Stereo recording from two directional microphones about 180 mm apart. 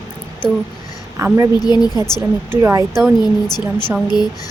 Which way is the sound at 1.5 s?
20° left (ahead or behind).